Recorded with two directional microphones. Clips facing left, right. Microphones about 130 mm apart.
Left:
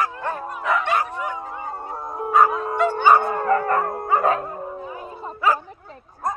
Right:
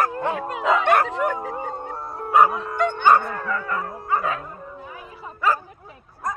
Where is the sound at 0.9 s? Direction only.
60° right (ahead or behind).